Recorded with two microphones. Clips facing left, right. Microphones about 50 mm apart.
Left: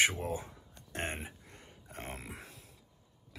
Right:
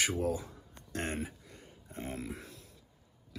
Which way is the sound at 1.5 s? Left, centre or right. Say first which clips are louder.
Even; left.